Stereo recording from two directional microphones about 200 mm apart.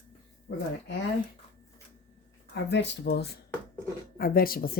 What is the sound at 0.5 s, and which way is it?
Speech, 75° left (ahead or behind).